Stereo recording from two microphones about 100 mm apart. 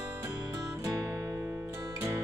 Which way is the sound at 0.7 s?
35° right (ahead or behind).